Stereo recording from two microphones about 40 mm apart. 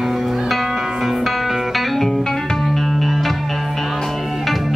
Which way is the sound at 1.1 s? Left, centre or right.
Centre.